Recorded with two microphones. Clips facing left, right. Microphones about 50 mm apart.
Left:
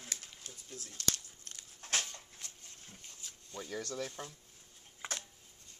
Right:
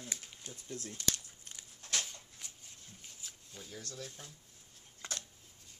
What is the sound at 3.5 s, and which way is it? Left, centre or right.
Speech, left.